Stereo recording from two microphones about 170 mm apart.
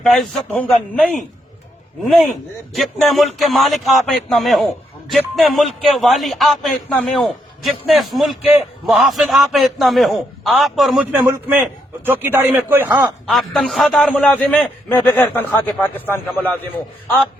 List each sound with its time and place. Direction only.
0.1 s a man's voice: centre (ahead or behind)
12.0 s a man's voice: 10° right (ahead or behind); by 16.6 s 10° left (ahead or behind)